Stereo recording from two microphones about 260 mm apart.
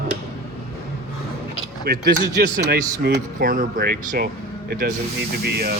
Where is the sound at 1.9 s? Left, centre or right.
Right.